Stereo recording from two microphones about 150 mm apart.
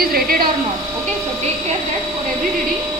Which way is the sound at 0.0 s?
80° right.